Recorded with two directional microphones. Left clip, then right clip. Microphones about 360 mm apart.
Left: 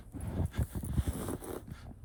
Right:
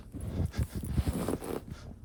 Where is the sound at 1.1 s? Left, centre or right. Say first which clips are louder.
Right 7 dB; right.